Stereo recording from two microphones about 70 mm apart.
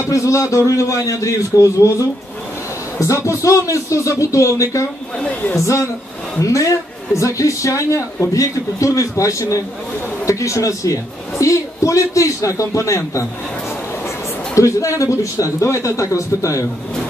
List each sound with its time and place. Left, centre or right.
0.0 s a man's voice: left
5.2 s speech: left
6.4 s a man's voice: left